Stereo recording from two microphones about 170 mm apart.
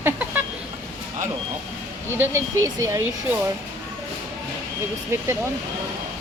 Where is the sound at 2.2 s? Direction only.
15° right (ahead or behind).